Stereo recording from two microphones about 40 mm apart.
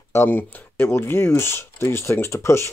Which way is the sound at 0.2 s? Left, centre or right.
Left.